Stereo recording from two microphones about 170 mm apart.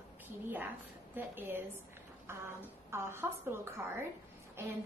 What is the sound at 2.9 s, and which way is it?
A woman's voice, 15° right (ahead or behind).